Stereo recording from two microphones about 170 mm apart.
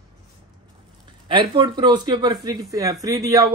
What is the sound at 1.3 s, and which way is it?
Speech, 30° right (ahead or behind).